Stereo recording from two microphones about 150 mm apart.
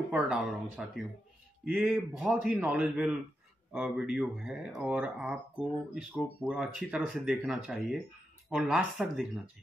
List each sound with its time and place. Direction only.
0.1 s a man's voice: 5° right (ahead or behind)
6.4 s a man's voice: 5° right (ahead or behind)